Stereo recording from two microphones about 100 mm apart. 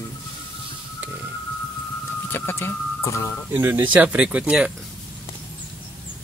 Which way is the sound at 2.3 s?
25° left (ahead or behind).